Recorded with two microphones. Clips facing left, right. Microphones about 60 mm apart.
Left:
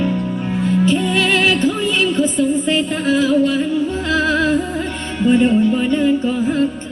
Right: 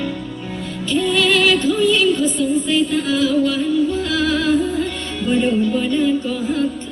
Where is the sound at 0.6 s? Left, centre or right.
Left.